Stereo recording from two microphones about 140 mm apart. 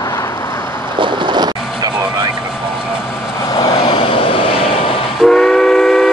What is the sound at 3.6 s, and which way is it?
Vehicle, 35° left (ahead or behind).